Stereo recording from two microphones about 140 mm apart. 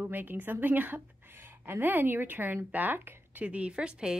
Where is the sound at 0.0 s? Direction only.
15° right (ahead or behind).